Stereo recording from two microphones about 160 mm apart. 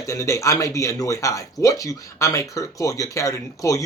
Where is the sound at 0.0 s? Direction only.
20° left (ahead or behind).